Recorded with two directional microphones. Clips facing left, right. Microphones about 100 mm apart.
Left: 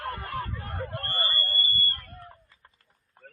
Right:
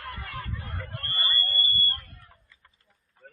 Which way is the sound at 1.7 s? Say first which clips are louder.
Even; 40° left (ahead or behind).